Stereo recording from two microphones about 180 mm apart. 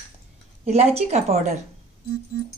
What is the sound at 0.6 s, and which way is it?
Speech, 35° right (ahead or behind).